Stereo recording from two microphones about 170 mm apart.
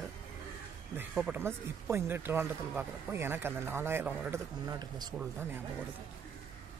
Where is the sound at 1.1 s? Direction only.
5° right (ahead or behind).